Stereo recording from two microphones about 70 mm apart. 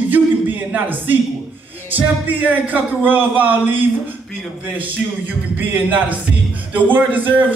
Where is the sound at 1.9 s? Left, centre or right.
Right.